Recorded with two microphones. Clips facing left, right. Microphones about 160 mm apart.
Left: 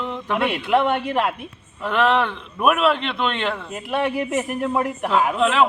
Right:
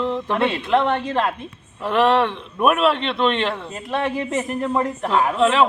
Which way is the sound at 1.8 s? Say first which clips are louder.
Right 2 dB; centre (ahead or behind).